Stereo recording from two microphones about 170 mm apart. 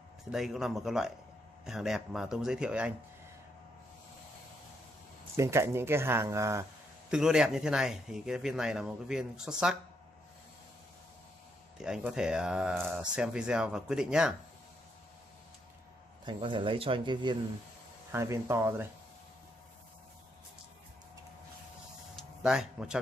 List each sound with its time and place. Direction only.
0.3 s speech: centre (ahead or behind)
5.3 s speech: 15° right (ahead or behind)
7.1 s speech: 5° right (ahead or behind)
11.8 s speech: 5° right (ahead or behind)
16.3 s speech: 30° right (ahead or behind)
18.1 s speech: 15° right (ahead or behind)
22.1 s a sound: 5° right (ahead or behind)